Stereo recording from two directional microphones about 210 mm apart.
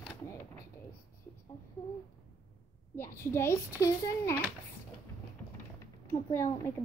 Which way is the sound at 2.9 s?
10° left (ahead or behind).